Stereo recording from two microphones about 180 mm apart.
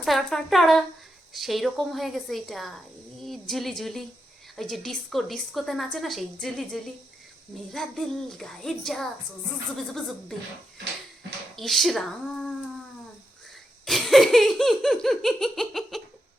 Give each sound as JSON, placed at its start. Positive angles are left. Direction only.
{"t": 0.0, "sound": "a woman's voice", "side_deg": 0}
{"t": 11.5, "sound": "speech", "side_deg": 0}
{"t": 13.8, "sound": "speech", "side_deg": 0}